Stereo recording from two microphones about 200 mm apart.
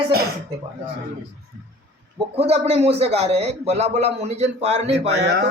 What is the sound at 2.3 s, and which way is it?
A man's voice, 30° right (ahead or behind).